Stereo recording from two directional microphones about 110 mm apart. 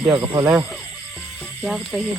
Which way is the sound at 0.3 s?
30° right (ahead or behind).